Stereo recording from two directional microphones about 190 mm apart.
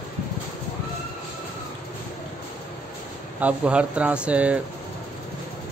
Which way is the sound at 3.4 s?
5° right (ahead or behind).